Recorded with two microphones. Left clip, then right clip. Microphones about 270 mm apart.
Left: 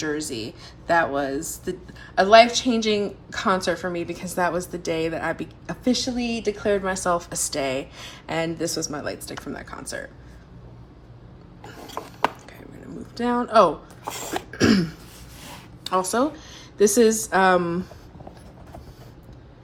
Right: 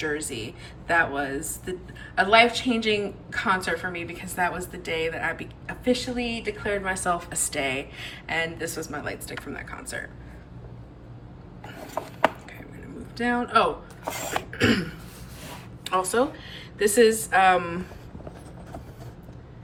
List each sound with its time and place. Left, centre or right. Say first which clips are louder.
0.0 s speech: left 2 dB; centre
13.1 s speech: left 4 dB; centre
14.0 s a sound: right 2 dB; centre
14.5 s throat clearing: left 3 dB; centre
15.8 s a woman's voice: left 1 dB; centre